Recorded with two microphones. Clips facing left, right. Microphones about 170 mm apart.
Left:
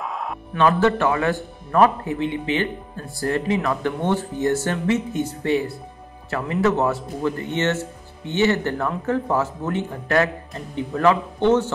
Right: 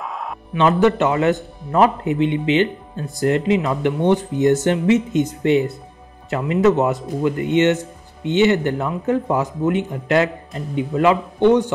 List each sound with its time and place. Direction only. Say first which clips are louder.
0.0 s music: even; centre (ahead or behind)
0.6 s a man's voice: right 3 dB; 20° right (ahead or behind)